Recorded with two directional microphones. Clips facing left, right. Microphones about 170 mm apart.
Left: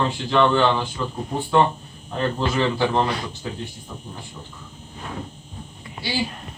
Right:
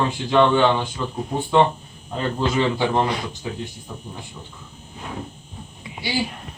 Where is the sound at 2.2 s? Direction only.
15° right (ahead or behind).